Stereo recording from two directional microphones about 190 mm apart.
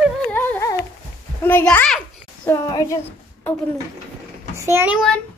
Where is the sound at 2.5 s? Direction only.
20° left (ahead or behind).